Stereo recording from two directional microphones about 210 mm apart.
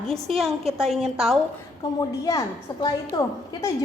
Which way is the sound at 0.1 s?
Centre (ahead or behind).